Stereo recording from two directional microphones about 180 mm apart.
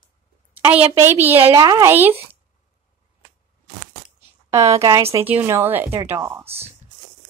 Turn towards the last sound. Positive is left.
turn(degrees=-35)  # may be behind; listen again after turning